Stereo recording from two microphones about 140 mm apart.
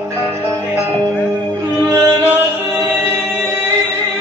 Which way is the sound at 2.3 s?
15° right (ahead or behind).